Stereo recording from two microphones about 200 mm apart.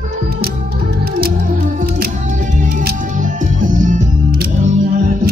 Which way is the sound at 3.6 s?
40° right (ahead or behind).